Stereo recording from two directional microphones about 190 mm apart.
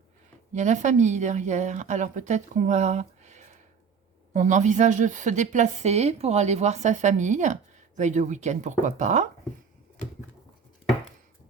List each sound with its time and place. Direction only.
0.5 s speech: 40° right (ahead or behind)